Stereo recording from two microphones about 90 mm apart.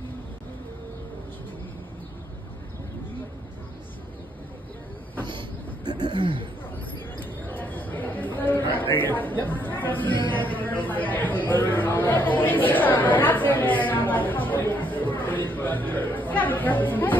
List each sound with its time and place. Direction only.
6.1 s speech: 70° right (ahead or behind)
7.4 s a sound: 20° left (ahead or behind)
8.9 s speech: 20° left (ahead or behind)
10.3 s chatter: 20° left (ahead or behind)